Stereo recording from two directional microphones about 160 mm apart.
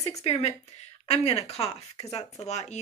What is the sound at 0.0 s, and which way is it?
Speech, 40° left (ahead or behind).